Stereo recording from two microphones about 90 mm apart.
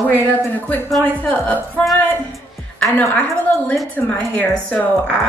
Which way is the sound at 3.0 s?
15° left (ahead or behind).